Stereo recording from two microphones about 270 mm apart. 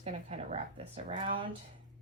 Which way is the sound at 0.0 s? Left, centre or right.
Right.